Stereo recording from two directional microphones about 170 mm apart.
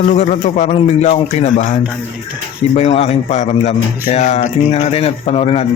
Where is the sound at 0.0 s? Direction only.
40° left (ahead or behind).